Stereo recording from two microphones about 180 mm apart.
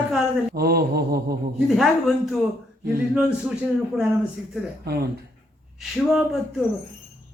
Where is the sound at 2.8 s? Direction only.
5° right (ahead or behind).